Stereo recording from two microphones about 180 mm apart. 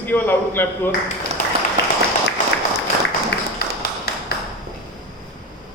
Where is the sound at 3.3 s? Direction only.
70° left (ahead or behind).